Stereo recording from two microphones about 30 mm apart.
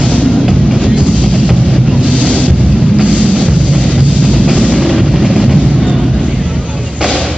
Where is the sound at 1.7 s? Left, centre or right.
Right.